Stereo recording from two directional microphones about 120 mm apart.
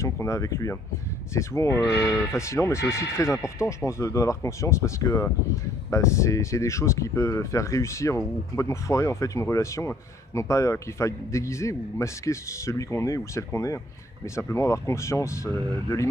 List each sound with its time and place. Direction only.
0.0 s speech: 25° left (ahead or behind)